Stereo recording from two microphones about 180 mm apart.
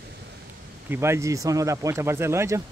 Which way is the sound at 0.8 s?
15° right (ahead or behind).